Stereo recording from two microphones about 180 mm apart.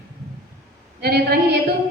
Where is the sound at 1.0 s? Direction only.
60° right (ahead or behind).